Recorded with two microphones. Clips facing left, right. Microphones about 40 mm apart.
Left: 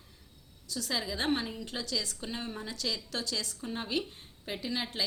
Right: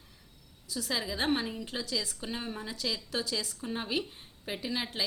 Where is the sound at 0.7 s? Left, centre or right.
Centre.